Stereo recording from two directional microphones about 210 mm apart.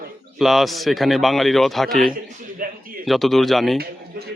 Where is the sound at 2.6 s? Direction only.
40° right (ahead or behind).